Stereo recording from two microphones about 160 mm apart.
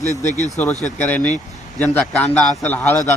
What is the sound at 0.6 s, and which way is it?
Speech, 10° left (ahead or behind).